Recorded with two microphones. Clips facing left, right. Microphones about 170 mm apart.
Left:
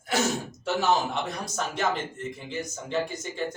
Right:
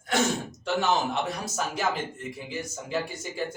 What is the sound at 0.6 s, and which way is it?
A man's voice, centre (ahead or behind).